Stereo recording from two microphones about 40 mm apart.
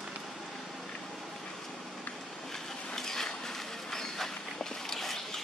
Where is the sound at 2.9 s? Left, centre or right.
Centre.